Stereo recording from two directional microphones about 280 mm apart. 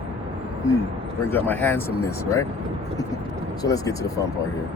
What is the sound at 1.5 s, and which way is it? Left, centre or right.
Speech, centre.